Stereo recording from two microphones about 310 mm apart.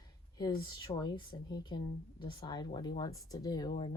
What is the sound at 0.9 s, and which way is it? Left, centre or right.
A woman's voice, centre.